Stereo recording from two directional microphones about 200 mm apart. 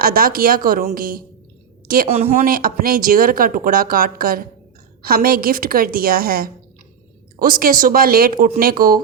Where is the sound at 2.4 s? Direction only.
45° right (ahead or behind).